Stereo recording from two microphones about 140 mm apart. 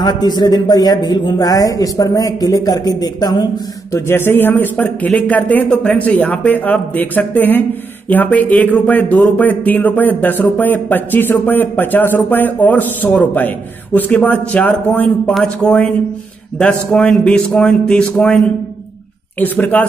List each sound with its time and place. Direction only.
0.0 s speech: 30° left (ahead or behind)
3.9 s a man's voice: 15° left (ahead or behind)
19.4 s speech: 10° left (ahead or behind)